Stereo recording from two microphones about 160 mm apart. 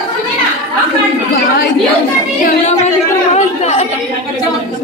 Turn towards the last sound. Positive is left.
turn(degrees=45)  # may be behind; listen again after turning